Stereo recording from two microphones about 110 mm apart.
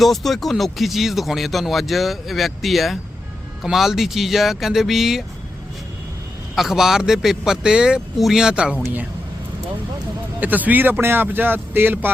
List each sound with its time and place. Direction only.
0.0 s speech: centre (ahead or behind)
6.6 s speech: 5° right (ahead or behind)
10.4 s speech: 15° right (ahead or behind)